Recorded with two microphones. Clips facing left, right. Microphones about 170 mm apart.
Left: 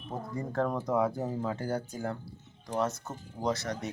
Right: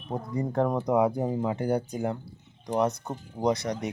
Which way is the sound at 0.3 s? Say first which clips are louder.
Right 5 dB; 15° right (ahead or behind).